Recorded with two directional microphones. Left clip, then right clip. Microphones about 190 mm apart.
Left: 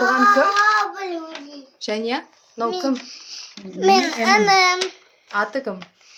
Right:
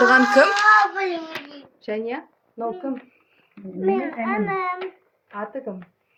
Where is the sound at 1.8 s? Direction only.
15° left (ahead or behind).